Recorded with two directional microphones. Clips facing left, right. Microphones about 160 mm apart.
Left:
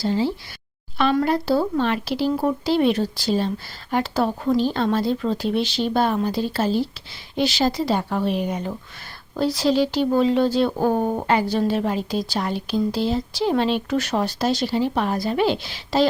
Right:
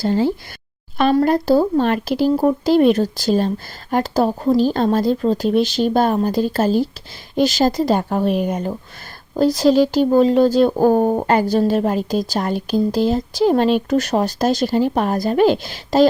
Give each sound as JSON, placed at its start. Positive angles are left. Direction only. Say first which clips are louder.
{"t": 0.0, "sound": "speech", "louder": "right 4 dB", "side_deg": -50}